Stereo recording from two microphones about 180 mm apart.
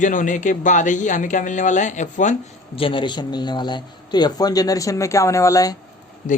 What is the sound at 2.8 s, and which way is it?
A man's voice, 25° left (ahead or behind).